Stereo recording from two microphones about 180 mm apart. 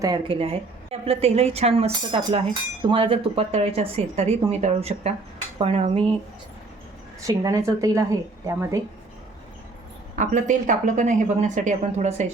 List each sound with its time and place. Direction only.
0.0 s speech: 25° right (ahead or behind)
7.3 s speech: 20° right (ahead or behind)
10.2 s speech: 45° right (ahead or behind)